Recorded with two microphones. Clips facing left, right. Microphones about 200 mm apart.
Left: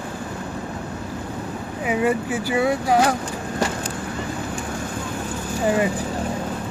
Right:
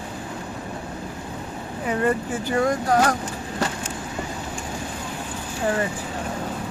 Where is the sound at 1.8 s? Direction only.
10° left (ahead or behind).